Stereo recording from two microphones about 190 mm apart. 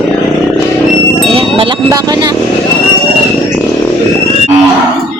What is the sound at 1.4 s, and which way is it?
Vehicle, 25° right (ahead or behind).